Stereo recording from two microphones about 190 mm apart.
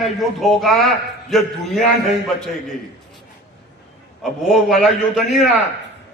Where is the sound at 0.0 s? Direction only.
Centre (ahead or behind).